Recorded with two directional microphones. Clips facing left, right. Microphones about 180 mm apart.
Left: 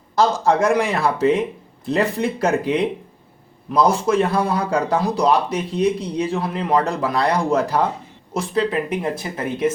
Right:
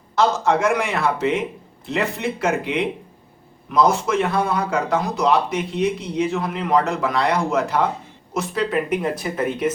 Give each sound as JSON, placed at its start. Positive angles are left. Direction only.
{"t": 0.2, "sound": "a man's voice", "side_deg": 35}